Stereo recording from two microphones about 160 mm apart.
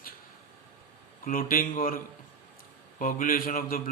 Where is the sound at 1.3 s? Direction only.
60° left (ahead or behind).